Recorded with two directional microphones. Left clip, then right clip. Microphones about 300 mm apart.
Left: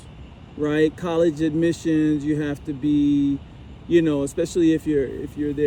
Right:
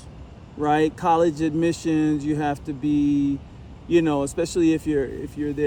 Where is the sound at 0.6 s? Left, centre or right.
Centre.